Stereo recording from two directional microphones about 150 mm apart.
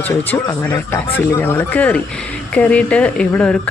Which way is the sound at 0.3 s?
20° left (ahead or behind).